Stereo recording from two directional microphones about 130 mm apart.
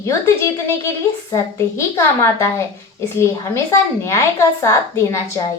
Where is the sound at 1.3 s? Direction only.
20° left (ahead or behind).